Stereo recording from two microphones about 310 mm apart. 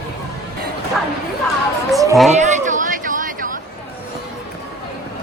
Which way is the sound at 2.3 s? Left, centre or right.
Right.